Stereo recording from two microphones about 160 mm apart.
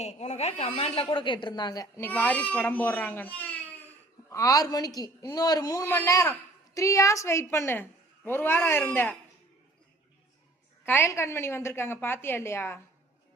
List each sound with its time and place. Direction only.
0.0 s a woman's voice: 45° left (ahead or behind); by 3.6 s 10° left (ahead or behind)
4.3 s a man's voice: 20° left (ahead or behind)
10.8 s a woman's voice: 15° left (ahead or behind)